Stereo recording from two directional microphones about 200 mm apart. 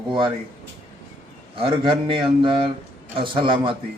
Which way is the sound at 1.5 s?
25° right (ahead or behind).